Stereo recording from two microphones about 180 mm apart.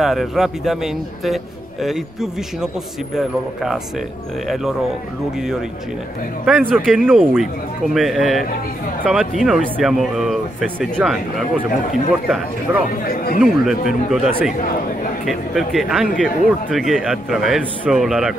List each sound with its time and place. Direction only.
0.0 s speech: centre (ahead or behind)
6.4 s speech: centre (ahead or behind)
12.9 s speech: 55° left (ahead or behind)
13.4 s speech: centre (ahead or behind)